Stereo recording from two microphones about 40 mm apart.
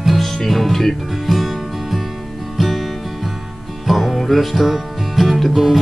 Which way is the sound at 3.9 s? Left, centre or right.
Centre.